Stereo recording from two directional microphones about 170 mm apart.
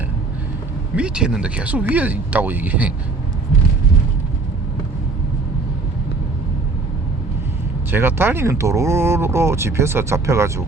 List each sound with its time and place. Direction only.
0.9 s speech: 5° right (ahead or behind)
7.9 s speech: 15° right (ahead or behind)